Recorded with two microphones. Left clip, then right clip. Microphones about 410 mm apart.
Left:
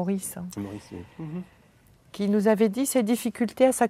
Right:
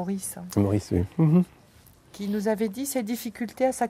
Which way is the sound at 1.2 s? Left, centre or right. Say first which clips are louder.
Right 15 dB; right.